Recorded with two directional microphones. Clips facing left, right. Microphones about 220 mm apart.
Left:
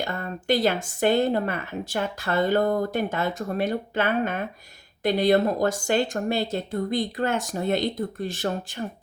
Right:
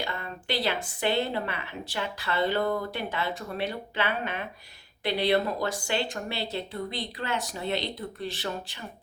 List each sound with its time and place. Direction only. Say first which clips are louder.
0.0 s speech: left 5 dB; 45° left (ahead or behind)